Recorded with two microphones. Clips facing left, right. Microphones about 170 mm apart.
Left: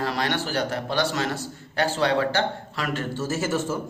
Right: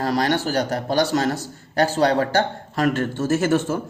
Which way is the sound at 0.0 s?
40° right (ahead or behind).